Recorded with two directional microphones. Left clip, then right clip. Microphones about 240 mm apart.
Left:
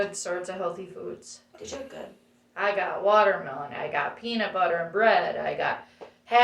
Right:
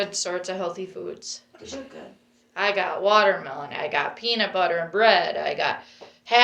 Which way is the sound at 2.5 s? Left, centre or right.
Right.